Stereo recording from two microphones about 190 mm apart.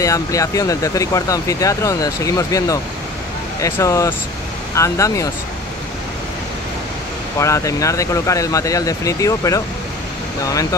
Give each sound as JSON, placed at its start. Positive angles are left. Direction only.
{"t": 0.0, "sound": "speech", "side_deg": 15}
{"t": 7.3, "sound": "speech", "side_deg": 15}